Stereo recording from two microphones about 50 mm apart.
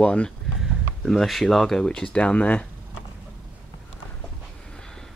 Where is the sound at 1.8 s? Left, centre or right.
Centre.